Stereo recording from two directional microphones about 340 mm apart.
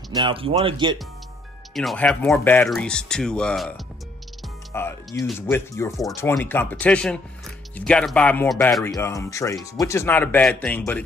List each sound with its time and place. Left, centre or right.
0.1 s speech: centre
1.7 s speech: centre